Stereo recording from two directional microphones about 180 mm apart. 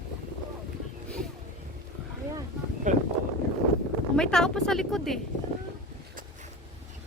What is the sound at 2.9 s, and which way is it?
Boat, 45° right (ahead or behind).